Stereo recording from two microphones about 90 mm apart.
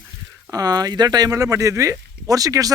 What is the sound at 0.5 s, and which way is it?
Speech, 45° right (ahead or behind).